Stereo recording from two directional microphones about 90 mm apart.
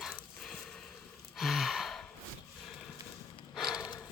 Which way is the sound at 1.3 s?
Centre (ahead or behind).